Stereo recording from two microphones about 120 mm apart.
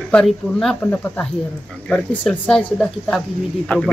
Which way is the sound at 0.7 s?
15° left (ahead or behind).